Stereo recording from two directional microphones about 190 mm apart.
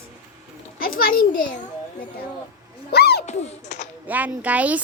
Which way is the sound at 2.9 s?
55° left (ahead or behind).